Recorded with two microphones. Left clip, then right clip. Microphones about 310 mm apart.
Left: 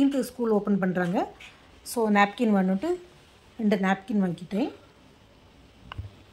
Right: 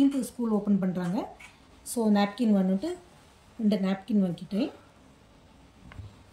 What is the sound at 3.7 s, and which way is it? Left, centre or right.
Speech, left.